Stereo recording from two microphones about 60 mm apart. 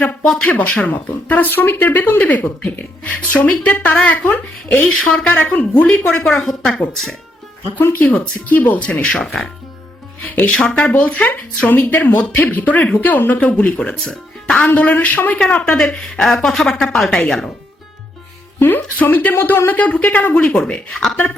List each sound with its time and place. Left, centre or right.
0.3 s a woman's voice: centre
0.5 s speech: left
6.4 s speech: centre
7.8 s speech: left
8.0 s speech: centre
8.9 s a woman's voice: centre
10.4 s speech: centre
13.4 s a woman's voice: centre
18.6 s a woman's voice: left; by 20.7 s centre
20.9 s speech: centre